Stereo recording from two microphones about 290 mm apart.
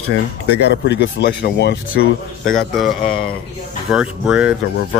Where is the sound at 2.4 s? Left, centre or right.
Centre.